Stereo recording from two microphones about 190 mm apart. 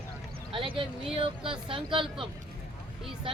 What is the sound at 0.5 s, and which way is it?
Speech, 25° right (ahead or behind).